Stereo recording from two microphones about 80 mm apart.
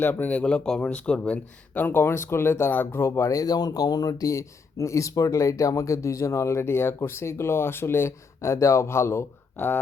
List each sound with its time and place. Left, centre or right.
0.0 s speech: left